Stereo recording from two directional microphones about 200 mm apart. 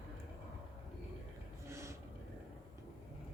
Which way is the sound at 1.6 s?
15° right (ahead or behind).